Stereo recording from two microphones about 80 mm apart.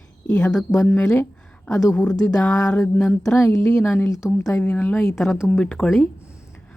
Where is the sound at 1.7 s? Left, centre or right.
Left.